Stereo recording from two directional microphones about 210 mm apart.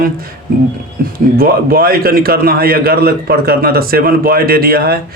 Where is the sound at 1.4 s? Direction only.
45° right (ahead or behind).